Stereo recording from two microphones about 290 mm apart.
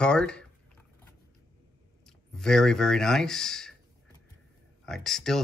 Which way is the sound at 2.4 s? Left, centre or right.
Centre.